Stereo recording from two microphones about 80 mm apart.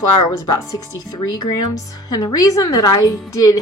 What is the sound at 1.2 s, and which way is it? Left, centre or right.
A woman's voice, left.